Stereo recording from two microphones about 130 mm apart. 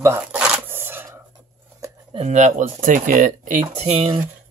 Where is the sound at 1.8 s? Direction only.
25° right (ahead or behind).